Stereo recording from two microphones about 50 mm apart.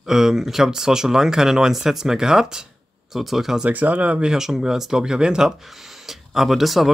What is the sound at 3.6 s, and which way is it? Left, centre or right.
Speech, right.